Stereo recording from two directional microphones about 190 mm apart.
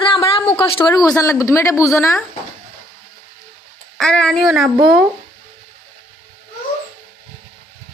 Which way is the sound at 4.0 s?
5° left (ahead or behind).